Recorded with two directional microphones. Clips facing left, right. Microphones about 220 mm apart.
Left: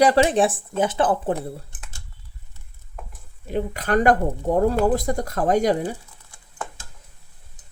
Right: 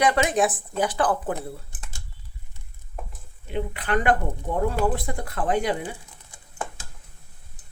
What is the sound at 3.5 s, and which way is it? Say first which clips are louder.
Speech: left 4 dB; 40° left (ahead or behind).